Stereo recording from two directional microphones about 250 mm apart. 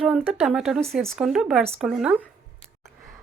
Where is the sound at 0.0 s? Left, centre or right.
Centre.